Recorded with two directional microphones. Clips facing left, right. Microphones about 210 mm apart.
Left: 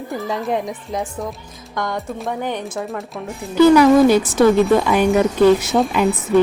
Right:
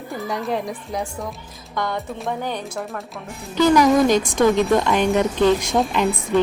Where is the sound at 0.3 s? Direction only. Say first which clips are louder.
Left 2 dB; 20° left (ahead or behind).